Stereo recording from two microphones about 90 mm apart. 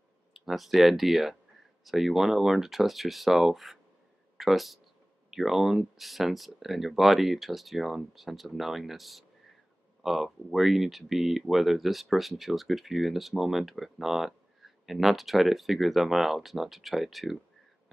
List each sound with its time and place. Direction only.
0.3 s speech: centre (ahead or behind)